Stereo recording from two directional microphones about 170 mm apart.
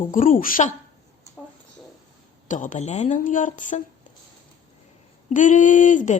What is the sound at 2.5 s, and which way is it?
A woman's voice, 45° left (ahead or behind).